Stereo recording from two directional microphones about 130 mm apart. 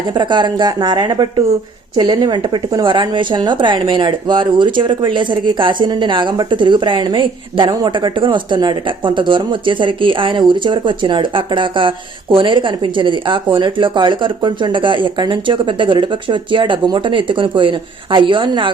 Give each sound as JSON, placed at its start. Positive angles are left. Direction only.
{"t": 0.1, "sound": "a woman's voice", "side_deg": -35}